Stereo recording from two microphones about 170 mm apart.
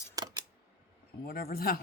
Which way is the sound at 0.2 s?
20° right (ahead or behind).